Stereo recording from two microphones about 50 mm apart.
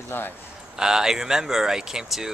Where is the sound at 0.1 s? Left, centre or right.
Left.